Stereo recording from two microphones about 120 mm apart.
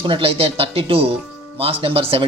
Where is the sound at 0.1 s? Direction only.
50° right (ahead or behind).